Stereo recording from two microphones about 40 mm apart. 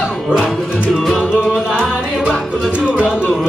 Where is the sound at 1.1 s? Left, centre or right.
Centre.